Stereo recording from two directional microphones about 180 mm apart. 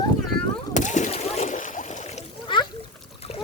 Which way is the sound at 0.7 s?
45° left (ahead or behind).